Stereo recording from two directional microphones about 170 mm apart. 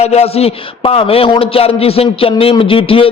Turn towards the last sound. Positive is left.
turn(degrees=30)  # may be behind; listen again after turning